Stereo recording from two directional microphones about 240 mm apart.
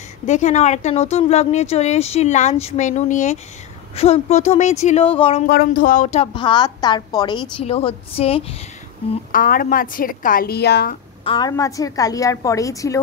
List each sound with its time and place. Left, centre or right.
0.3 s speech: left
5.5 s speech: left
9.1 s a woman's voice: left
11.2 s a woman's voice: centre